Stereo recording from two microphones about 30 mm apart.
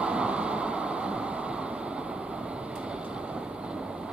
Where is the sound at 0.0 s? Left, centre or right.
Right.